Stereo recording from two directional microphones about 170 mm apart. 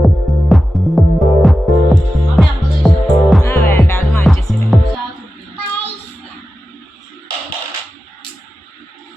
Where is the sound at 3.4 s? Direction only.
15° left (ahead or behind).